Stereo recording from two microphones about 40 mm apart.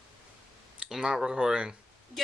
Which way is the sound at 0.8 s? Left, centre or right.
Centre.